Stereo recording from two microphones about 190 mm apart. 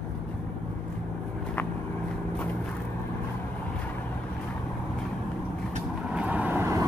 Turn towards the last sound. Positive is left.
turn(degrees=-15)  # may be behind; listen again after turning